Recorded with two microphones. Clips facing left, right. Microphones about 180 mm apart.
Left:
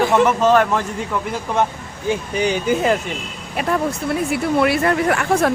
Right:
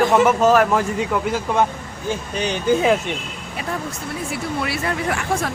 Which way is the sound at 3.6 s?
65° left (ahead or behind).